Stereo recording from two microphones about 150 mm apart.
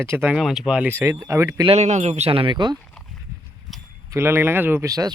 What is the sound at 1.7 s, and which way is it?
Speech, 45° right (ahead or behind).